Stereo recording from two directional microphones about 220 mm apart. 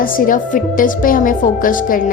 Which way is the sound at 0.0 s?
40° left (ahead or behind).